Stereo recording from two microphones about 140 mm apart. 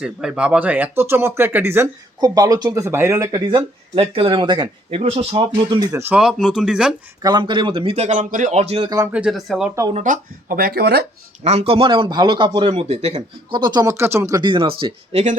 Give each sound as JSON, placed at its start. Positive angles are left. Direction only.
{"t": 0.0, "sound": "speech", "side_deg": -5}
{"t": 3.4, "sound": "speech", "side_deg": -35}
{"t": 4.9, "sound": "a man's voice", "side_deg": -45}
{"t": 5.8, "sound": "speech", "side_deg": -20}
{"t": 6.1, "sound": "speech", "side_deg": -5}
{"t": 7.2, "sound": "a man's voice", "side_deg": -30}
{"t": 9.1, "sound": "speech", "side_deg": -5}
{"t": 9.9, "sound": "speech", "side_deg": -65}
{"t": 11.4, "sound": "speech", "side_deg": -45}
{"t": 13.5, "sound": "speech", "side_deg": -30}
{"t": 14.4, "sound": "speech", "side_deg": -35}